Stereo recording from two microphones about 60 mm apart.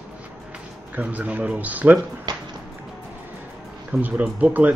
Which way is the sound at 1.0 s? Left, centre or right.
Right.